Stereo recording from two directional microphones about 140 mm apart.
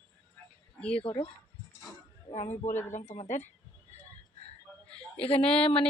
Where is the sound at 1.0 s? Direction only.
40° left (ahead or behind).